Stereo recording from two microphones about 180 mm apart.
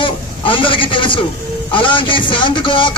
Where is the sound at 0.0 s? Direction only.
30° left (ahead or behind).